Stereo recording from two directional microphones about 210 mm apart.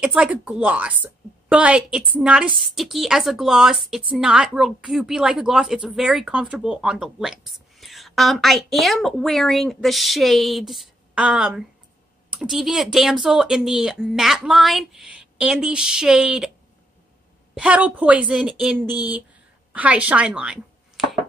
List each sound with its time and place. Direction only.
0.0 s speech: 5° right (ahead or behind)
17.6 s a woman's voice: 5° right (ahead or behind)